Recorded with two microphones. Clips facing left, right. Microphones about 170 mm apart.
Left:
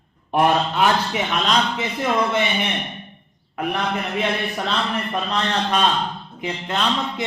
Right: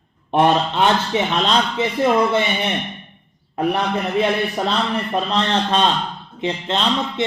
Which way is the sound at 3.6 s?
30° right (ahead or behind).